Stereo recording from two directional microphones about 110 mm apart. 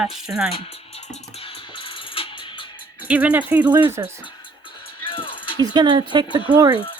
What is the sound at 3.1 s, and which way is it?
Speech, 15° right (ahead or behind).